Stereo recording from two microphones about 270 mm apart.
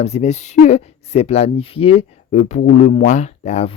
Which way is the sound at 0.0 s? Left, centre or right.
Left.